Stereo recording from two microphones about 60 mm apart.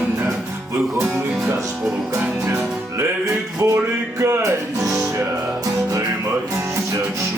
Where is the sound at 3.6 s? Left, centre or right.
Right.